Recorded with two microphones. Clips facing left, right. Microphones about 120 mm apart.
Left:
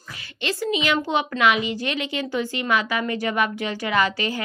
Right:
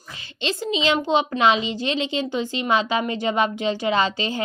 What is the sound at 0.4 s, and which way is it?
A woman's voice, 20° right (ahead or behind).